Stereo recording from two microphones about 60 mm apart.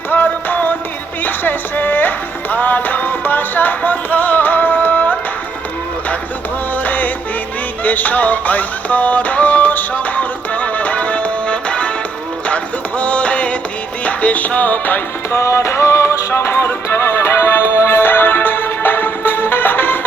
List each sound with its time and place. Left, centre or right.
0.1 s music: left
6.8 s music: left
13.0 s music: left